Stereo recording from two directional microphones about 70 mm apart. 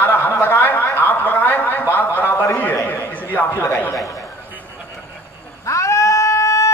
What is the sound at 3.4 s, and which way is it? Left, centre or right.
Speech, left.